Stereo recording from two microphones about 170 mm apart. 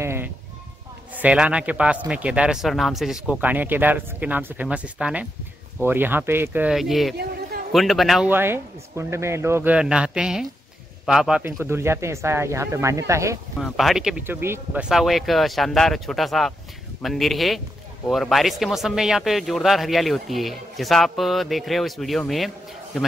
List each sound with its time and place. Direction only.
0.0 s sheep: 15° right (ahead or behind)
1.1 s a man's voice: 5° right (ahead or behind)
8.3 s a man's voice: 15° right (ahead or behind)
13.6 s speech: centre (ahead or behind)